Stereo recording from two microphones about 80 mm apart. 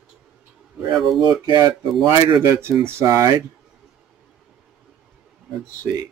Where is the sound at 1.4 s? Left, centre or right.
Right.